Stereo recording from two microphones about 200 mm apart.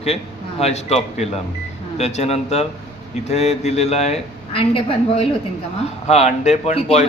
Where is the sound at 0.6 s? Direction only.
30° left (ahead or behind).